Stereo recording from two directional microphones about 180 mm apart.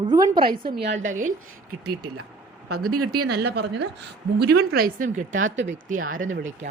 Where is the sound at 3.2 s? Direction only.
65° right (ahead or behind); by 6.6 s 45° right (ahead or behind).